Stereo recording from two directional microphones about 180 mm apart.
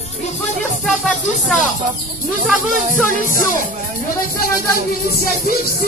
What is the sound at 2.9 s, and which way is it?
Music, 50° right (ahead or behind).